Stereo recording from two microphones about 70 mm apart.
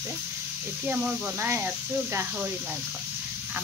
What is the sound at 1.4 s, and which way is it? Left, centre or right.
Speech, right.